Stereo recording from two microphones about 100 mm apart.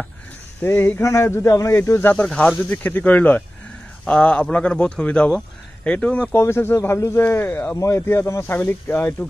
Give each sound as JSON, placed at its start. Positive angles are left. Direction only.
{"t": 0.6, "sound": "speech", "side_deg": 20}
{"t": 2.2, "sound": "speech", "side_deg": 5}
{"t": 6.3, "sound": "speech", "side_deg": 25}